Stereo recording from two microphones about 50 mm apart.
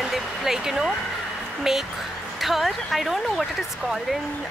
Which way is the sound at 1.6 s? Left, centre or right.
Centre.